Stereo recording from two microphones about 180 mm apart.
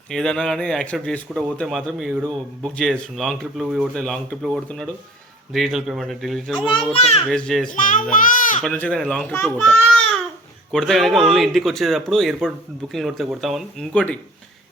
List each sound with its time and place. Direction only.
0.1 s speech: 5° left (ahead or behind)
6.9 s a child's voice: 35° left (ahead or behind)
7.3 s speech: 5° left (ahead or behind)
7.7 s a child's voice: 50° left (ahead or behind)
8.6 s a child's voice: 5° left (ahead or behind)
9.3 s a child's voice: 15° left (ahead or behind)
9.6 s a sound: 5° left (ahead or behind)
10.7 s speech: centre (ahead or behind)